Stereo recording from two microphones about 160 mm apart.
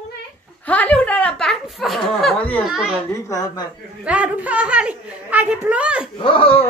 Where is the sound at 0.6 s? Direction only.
10° left (ahead or behind).